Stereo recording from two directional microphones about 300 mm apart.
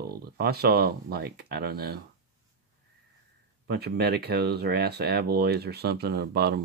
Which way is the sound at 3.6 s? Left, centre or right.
Right.